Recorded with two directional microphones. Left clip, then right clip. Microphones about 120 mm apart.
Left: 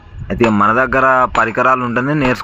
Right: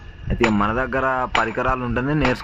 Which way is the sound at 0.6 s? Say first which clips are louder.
Left 9 dB; 30° left (ahead or behind).